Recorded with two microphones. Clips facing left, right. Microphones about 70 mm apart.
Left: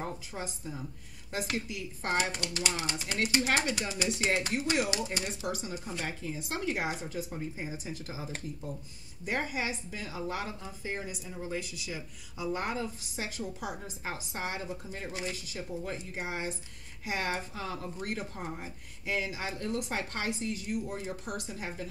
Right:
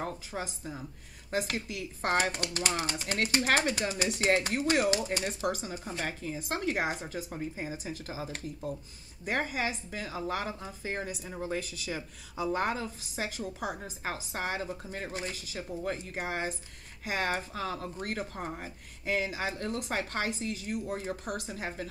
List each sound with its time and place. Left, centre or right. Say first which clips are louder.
1.7 s a woman's voice: right 3 dB; right
9.2 s a woman's voice: right 2 dB; right